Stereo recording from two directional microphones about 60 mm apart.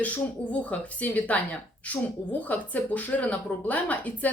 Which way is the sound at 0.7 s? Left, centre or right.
Left.